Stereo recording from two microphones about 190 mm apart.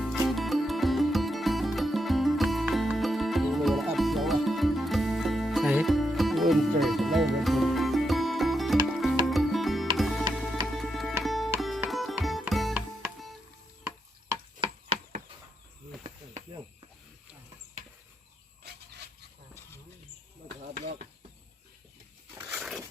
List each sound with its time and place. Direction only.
0.0 s music: centre (ahead or behind)
13.9 s stir: 15° right (ahead or behind)
14.6 s a sound: 25° right (ahead or behind)
16.4 s cricket: 35° right (ahead or behind)
18.6 s dog: 60° right (ahead or behind)
22.4 s a sound: 15° right (ahead or behind)